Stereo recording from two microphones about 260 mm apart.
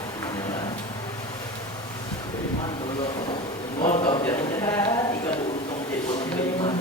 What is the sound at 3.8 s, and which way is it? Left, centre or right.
Speech, left.